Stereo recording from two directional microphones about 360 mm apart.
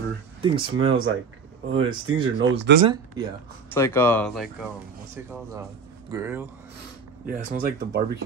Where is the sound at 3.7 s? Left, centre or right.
Centre.